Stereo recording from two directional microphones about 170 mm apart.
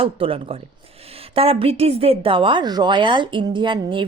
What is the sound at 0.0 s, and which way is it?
A woman's voice, 30° right (ahead or behind).